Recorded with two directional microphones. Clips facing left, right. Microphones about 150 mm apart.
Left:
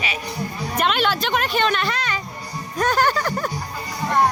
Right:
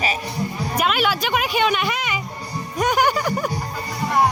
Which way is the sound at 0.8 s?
5° right (ahead or behind).